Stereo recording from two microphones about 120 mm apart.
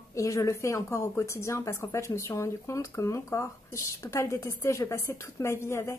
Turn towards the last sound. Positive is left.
turn(degrees=25)  # may be behind; listen again after turning